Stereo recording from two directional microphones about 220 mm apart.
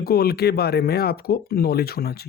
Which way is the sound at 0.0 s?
45° left (ahead or behind).